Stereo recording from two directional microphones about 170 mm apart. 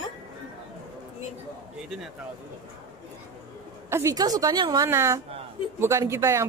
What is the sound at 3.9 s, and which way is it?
A woman's voice, 15° right (ahead or behind).